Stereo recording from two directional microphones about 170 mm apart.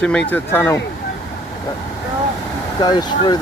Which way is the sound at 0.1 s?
5° left (ahead or behind).